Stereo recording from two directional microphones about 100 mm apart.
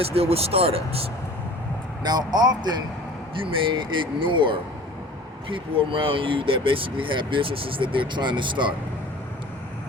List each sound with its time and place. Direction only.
0.0 s speech: 80° right
2.0 s speech: 45° right (ahead or behind)
3.3 s speech: 60° right (ahead or behind)